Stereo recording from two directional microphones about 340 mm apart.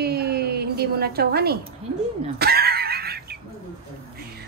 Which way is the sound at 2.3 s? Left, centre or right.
Right.